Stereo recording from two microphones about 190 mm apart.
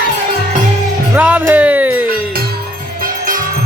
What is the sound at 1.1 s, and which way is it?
Music, 10° right (ahead or behind).